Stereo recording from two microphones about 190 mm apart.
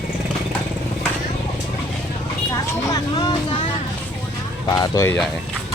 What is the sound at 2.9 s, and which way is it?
Speech, 25° left (ahead or behind).